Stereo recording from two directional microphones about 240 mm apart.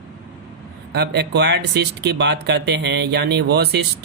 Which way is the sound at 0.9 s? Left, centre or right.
Right.